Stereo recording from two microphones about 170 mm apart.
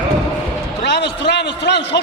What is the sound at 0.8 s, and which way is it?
A man's voice, 90° left.